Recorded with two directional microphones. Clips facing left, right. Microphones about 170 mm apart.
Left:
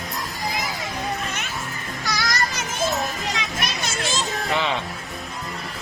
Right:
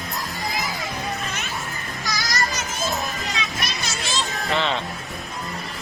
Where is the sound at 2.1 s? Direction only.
55° left (ahead or behind).